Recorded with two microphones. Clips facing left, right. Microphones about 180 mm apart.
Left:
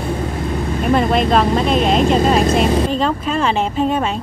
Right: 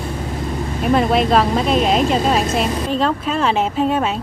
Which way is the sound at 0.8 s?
Centre (ahead or behind).